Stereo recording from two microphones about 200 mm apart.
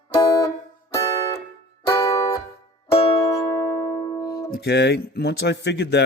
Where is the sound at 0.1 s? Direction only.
15° left (ahead or behind).